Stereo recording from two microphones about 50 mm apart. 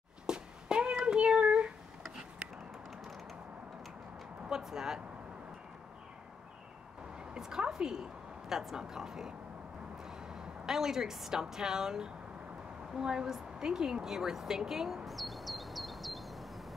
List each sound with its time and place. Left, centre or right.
0.3 s cat: centre
1.0 s child singing: right
4.5 s speech: centre
7.3 s a woman's voice: centre
15.0 s a sound: centre